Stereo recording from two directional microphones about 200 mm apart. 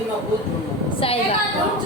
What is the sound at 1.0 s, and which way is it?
Speech, 30° left (ahead or behind).